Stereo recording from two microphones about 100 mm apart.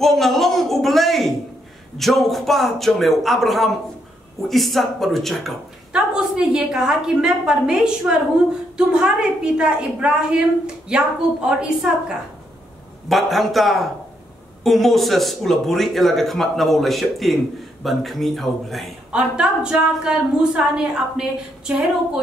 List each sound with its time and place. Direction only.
0.0 s a sound: centre (ahead or behind)
2.0 s a man's voice: centre (ahead or behind)
13.1 s a man's voice: centre (ahead or behind)
19.1 s a woman's voice: 10° right (ahead or behind)